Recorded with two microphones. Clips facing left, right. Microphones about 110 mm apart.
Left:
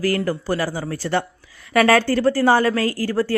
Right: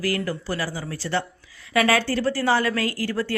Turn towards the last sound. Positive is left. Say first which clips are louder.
# left 5 dB
turn(degrees=40)  # may be behind; listen again after turning